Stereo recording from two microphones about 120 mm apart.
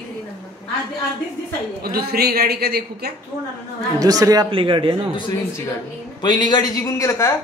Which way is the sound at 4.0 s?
30° right (ahead or behind).